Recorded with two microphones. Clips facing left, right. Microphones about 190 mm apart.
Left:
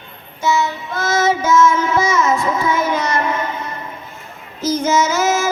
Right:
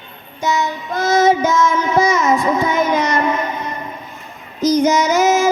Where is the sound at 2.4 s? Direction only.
15° right (ahead or behind).